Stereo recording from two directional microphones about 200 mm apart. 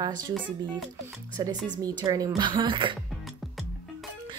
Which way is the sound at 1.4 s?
20° right (ahead or behind).